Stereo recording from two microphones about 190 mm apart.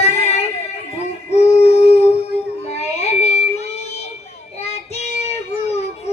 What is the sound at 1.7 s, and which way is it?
Howl, 35° left (ahead or behind).